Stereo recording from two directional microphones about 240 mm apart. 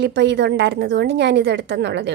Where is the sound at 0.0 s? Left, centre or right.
Right.